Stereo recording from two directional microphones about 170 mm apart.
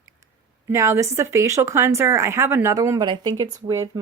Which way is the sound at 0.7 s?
15° right (ahead or behind).